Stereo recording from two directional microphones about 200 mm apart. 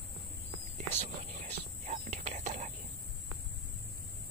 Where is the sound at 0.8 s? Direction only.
35° right (ahead or behind).